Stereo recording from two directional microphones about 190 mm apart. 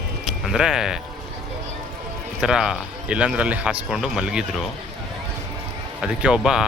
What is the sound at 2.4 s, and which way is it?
A man's voice, 5° right (ahead or behind).